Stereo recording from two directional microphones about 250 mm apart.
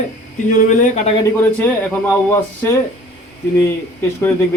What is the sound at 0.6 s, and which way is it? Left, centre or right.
Speech, left.